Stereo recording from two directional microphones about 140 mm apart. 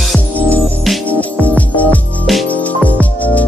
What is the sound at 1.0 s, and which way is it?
Music, 10° left (ahead or behind).